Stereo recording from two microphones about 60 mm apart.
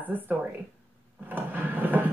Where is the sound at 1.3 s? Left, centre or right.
Right.